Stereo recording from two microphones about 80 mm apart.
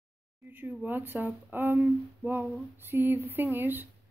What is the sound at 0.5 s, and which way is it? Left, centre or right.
Speech, right.